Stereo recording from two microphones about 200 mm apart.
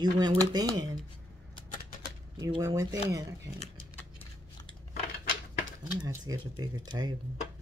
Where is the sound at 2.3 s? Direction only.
20° right (ahead or behind).